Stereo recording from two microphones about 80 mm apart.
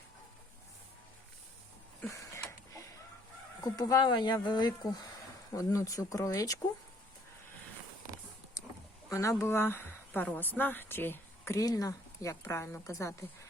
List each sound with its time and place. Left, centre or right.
2.0 s a sound: left
3.6 s speech: left
5.5 s speech: left
9.0 s speech: left
11.5 s a woman's voice: left